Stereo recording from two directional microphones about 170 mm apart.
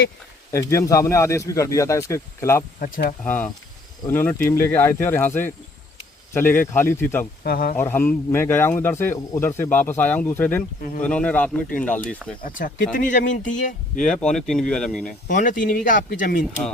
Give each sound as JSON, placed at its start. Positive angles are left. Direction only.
{"t": 0.5, "sound": "speech", "side_deg": 15}
{"t": 2.8, "sound": "speech", "side_deg": 55}
{"t": 3.2, "sound": "speech", "side_deg": 10}
{"t": 7.4, "sound": "speech", "side_deg": 65}
{"t": 7.8, "sound": "speech", "side_deg": 10}
{"t": 12.4, "sound": "speech", "side_deg": 55}
{"t": 14.0, "sound": "speech", "side_deg": 5}
{"t": 15.3, "sound": "speech", "side_deg": 50}